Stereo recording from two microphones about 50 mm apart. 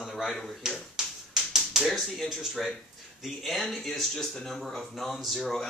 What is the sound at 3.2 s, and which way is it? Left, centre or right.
Speech, centre.